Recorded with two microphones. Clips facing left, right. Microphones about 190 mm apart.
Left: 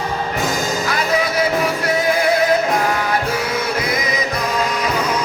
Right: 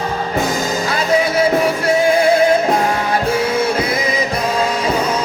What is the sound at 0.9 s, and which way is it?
Music, 25° right (ahead or behind).